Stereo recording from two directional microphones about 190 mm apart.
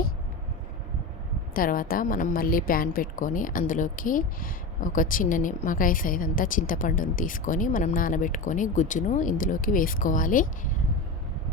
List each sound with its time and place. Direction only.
1.5 s a woman's voice: 45° left (ahead or behind)